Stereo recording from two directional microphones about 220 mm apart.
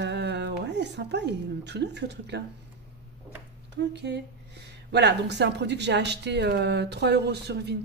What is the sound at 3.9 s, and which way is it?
Speech, 50° right (ahead or behind).